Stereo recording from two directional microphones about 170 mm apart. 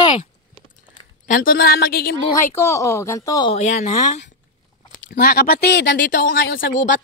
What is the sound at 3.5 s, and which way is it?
Speech, 40° left (ahead or behind).